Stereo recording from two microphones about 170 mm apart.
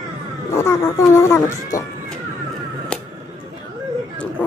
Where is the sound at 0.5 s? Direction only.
15° left (ahead or behind).